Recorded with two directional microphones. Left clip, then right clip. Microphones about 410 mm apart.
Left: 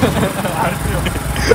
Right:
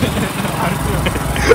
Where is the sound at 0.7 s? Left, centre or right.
Centre.